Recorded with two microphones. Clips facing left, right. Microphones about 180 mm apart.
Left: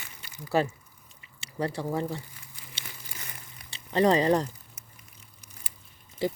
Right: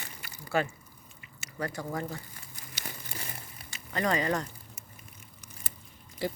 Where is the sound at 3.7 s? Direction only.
30° left (ahead or behind).